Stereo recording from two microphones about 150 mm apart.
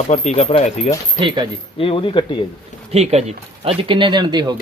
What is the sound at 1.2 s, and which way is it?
Speech, 35° right (ahead or behind).